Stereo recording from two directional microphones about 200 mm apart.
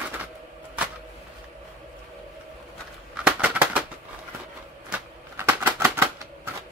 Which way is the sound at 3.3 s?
5° right (ahead or behind).